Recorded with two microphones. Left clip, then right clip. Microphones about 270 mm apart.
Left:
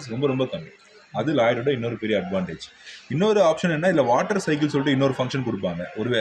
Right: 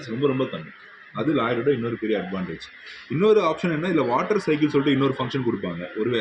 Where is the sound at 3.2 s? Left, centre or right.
Left.